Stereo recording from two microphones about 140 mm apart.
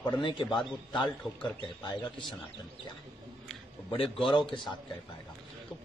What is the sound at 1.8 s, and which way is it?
Speech, 35° left (ahead or behind).